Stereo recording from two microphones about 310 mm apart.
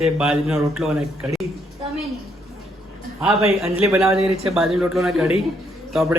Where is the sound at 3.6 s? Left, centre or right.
Centre.